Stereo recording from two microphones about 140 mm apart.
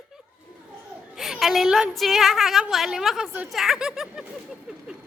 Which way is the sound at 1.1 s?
5° right (ahead or behind).